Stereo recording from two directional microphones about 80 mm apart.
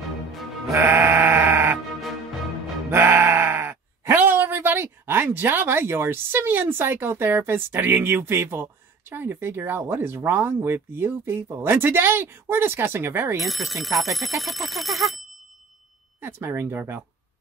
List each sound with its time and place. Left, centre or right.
0.3 s music: centre
0.7 s sheep: right
2.9 s sheep: right
4.1 s speech: right
13.4 s speech: centre
16.2 s speech: right